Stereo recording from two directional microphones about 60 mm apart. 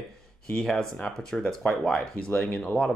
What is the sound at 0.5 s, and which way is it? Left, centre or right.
Speech, centre.